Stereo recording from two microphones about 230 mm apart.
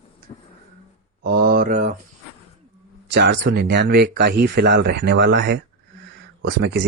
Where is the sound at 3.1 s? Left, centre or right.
Right.